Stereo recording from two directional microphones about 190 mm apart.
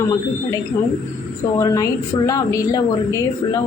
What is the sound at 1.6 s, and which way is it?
A woman's voice, 20° left (ahead or behind).